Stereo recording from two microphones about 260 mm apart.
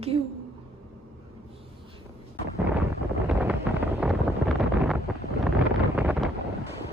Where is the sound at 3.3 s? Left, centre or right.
Centre.